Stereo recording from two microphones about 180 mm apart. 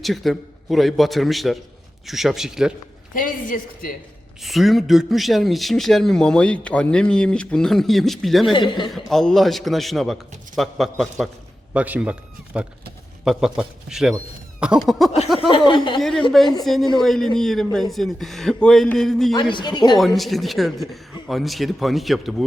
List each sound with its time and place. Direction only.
0.0 s a man's voice: centre (ahead or behind)
3.2 s speech: 50° left (ahead or behind)
4.4 s a man's voice: centre (ahead or behind)
8.5 s a man's voice: 25° left (ahead or behind)
8.9 s a man's voice: centre (ahead or behind)
13.2 s a man's voice: 5° right (ahead or behind)
15.4 s a man's voice: 30° left (ahead or behind)
16.0 s a man's voice: centre (ahead or behind)
19.3 s a man's voice: 25° left (ahead or behind)
20.0 s a man's voice: centre (ahead or behind)